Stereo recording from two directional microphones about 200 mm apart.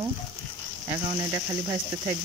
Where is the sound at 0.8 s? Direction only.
20° right (ahead or behind).